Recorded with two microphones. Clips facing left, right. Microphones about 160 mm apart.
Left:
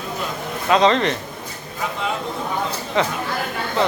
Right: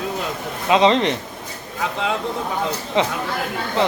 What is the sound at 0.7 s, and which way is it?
Speech, 20° right (ahead or behind).